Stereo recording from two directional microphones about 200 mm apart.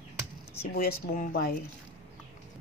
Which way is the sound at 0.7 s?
45° left (ahead or behind).